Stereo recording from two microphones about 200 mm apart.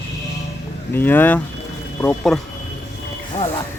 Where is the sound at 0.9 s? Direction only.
10° left (ahead or behind).